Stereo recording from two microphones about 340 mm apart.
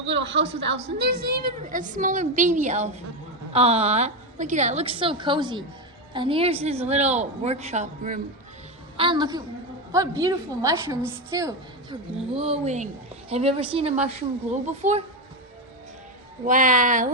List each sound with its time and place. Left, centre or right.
0.0 s a woman's voice: right
16.4 s a woman's voice: right